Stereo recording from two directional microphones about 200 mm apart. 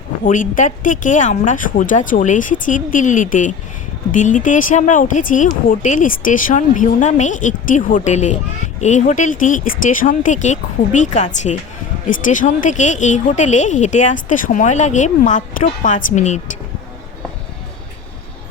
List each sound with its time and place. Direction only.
0.3 s speech: 40° left (ahead or behind)